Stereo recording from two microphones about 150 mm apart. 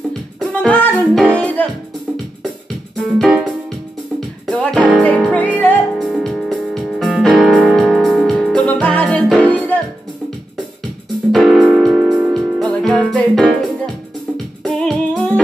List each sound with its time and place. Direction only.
0.4 s music: 5° left (ahead or behind)
3.0 s music: centre (ahead or behind)
4.5 s music: 5° left (ahead or behind)
11.3 s music: centre (ahead or behind)